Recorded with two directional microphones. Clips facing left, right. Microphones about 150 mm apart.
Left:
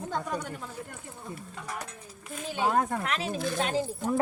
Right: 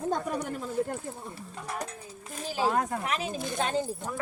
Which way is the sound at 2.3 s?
35° right (ahead or behind).